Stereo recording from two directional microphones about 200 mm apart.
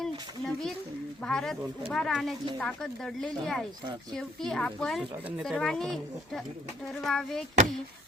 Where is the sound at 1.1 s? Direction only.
5° left (ahead or behind).